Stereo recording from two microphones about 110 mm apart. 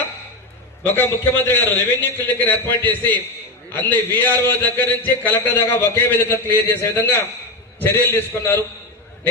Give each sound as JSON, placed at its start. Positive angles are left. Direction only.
{"t": 0.9, "sound": "a man's voice", "side_deg": 20}